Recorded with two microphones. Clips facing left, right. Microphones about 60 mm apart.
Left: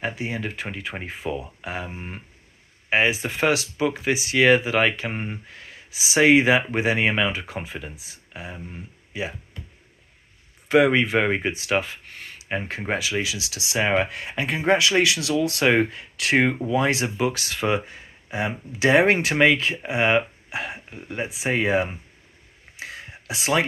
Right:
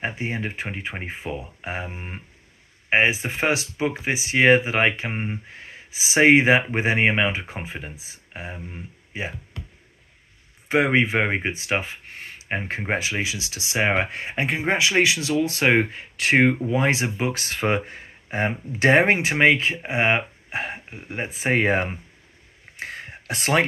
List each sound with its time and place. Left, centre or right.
0.0 s speech: right
1.9 s speech: right
5.5 s speech: right
10.7 s speech: right
19.2 s speech: right
22.8 s a sound: right